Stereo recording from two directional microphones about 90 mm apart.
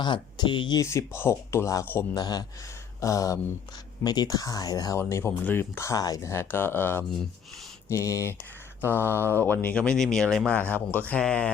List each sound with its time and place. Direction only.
0.0 s speech: 60° left (ahead or behind)
0.8 s speech: 30° left (ahead or behind)
2.1 s speech: 50° left (ahead or behind)
3.0 s speech: 35° left (ahead or behind)
4.0 s speech: 50° left (ahead or behind)
4.9 s speech: 30° left (ahead or behind)
5.9 s speech: 40° left (ahead or behind)
6.3 s speech: 25° left (ahead or behind)
7.9 s speech: 35° left (ahead or behind); by 11.5 s 10° left (ahead or behind)